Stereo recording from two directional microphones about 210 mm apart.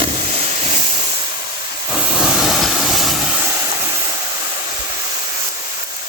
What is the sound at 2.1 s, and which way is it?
Vehicle, centre (ahead or behind).